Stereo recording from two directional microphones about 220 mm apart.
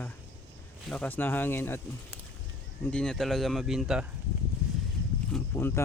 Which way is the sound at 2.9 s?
5° left (ahead or behind).